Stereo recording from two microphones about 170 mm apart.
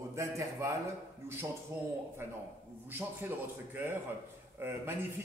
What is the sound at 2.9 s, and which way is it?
A man's voice, 10° right (ahead or behind).